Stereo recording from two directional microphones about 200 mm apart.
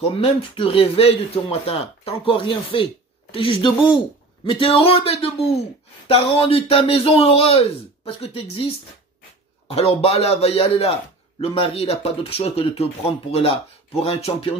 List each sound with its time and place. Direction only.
0.1 s speech: 30° left (ahead or behind)
9.7 s speech: 30° left (ahead or behind)